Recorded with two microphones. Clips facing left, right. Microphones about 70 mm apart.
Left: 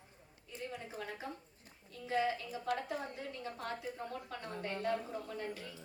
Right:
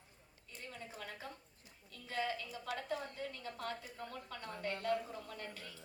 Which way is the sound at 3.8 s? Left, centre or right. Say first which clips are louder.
Left 5 dB; left.